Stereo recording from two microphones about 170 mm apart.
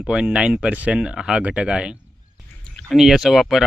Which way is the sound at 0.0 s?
5° right (ahead or behind).